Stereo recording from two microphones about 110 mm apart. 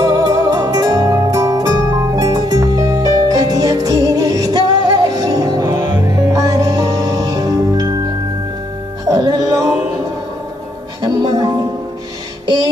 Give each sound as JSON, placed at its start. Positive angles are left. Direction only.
{"t": 0.0, "sound": "music", "side_deg": -35}
{"t": 9.1, "sound": "music", "side_deg": -35}
{"t": 11.0, "sound": "music", "side_deg": -40}